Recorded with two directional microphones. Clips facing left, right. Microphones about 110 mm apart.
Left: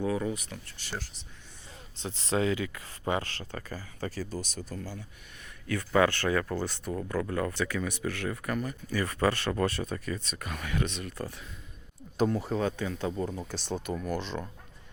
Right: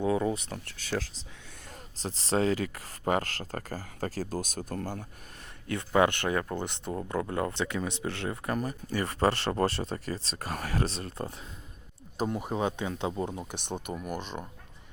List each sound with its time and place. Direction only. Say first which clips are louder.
0.0 s speech: right 3 dB; 25° right (ahead or behind)
2.0 s speech: right 1 dB; 35° right (ahead or behind); by 5.0 s 50° right (ahead or behind)
5.6 s speech: even; 25° right (ahead or behind)
12.2 s speech: left 2 dB; 15° right (ahead or behind)